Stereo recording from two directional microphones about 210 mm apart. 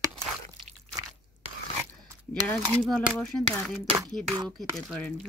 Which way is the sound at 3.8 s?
25° right (ahead or behind).